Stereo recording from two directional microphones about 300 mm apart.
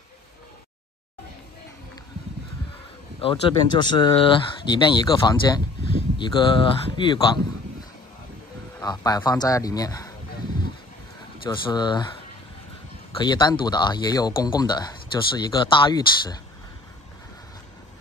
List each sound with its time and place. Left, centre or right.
3.2 s speech: centre
8.7 s speech: centre
11.4 s speech: centre
13.1 s speech: centre